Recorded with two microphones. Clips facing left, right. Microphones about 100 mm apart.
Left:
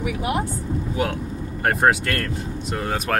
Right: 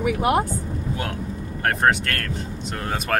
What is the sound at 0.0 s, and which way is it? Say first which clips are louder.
Speech: right 4 dB; 45° right (ahead or behind).